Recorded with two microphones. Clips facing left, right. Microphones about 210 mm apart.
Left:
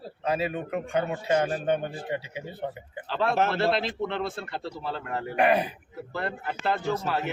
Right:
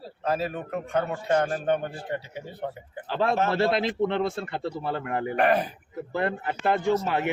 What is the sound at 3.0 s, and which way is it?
Speech, 15° right (ahead or behind).